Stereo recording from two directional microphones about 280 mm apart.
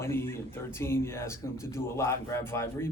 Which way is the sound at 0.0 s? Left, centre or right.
Centre.